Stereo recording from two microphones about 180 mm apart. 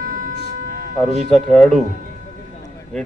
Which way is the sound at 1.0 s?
Centre (ahead or behind).